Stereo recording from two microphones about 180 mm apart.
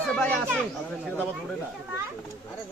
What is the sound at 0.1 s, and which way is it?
Speech, 10° left (ahead or behind).